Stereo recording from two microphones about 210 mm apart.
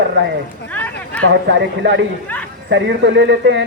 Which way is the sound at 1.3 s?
55° right (ahead or behind).